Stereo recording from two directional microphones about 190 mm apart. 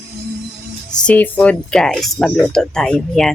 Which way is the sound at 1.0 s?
10° left (ahead or behind).